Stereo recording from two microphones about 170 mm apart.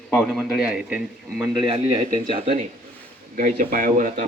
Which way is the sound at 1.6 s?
25° right (ahead or behind).